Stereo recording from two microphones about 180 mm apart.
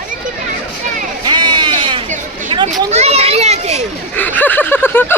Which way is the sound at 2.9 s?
35° right (ahead or behind).